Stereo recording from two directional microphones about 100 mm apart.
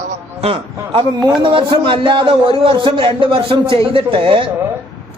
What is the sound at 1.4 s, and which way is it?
Speech, 55° right (ahead or behind).